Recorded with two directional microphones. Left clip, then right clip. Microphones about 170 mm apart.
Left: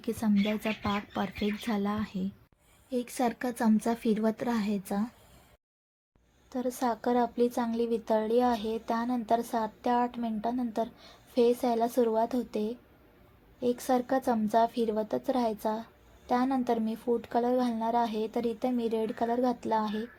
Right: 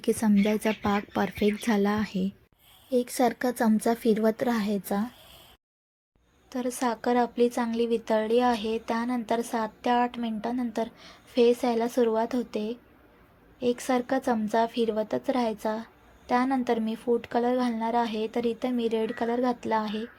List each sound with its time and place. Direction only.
0.0 s speech: 30° right (ahead or behind)
2.9 s a woman's voice: 15° right (ahead or behind)
6.5 s a woman's voice: 10° right (ahead or behind)